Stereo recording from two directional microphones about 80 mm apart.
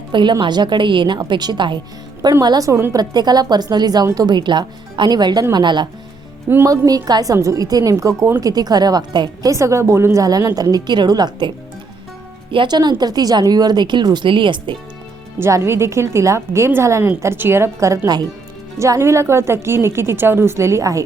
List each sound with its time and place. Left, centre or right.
0.1 s speech: right
1.3 s speech: right
2.4 s speech: right
2.6 s a woman's voice: right
2.9 s a woman's voice: right
4.4 s speech: right
6.7 s a woman's voice: right
7.3 s a woman's voice: right
9.5 s a woman's voice: right
15.4 s a woman's voice: right